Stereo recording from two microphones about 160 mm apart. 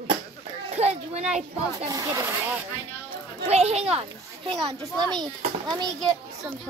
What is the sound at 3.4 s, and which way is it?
Speech, 40° right (ahead or behind).